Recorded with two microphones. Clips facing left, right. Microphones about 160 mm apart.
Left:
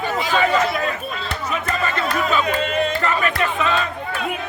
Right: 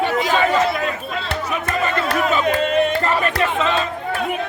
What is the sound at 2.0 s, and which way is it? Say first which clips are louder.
Speech: right 2 dB; 70° right (ahead or behind).